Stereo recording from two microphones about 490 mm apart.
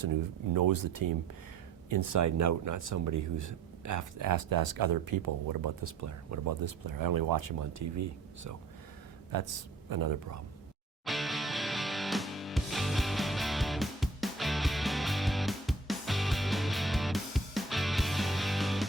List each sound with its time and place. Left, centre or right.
0.0 s speech: right
9.3 s speech: right
11.0 s music: centre